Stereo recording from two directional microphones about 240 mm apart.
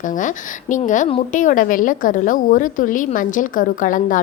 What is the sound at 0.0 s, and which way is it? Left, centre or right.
A woman's voice, left.